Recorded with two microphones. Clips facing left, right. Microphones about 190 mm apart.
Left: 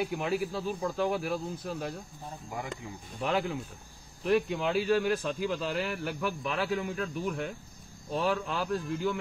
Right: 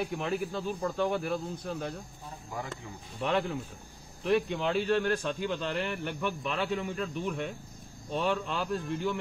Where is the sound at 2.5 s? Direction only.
20° left (ahead or behind).